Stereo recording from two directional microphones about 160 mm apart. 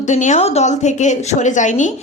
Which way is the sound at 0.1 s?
50° left (ahead or behind).